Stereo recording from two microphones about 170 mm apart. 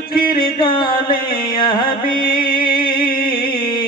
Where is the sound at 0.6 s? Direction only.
30° left (ahead or behind).